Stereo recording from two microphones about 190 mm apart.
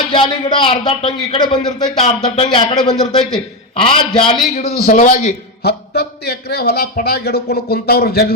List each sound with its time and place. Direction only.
0.1 s speech: 25° left (ahead or behind)
4.6 s a man's voice: 45° left (ahead or behind)
5.6 s a man's voice: 60° left (ahead or behind)